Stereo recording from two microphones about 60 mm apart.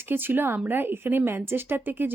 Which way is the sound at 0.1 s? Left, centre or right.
Right.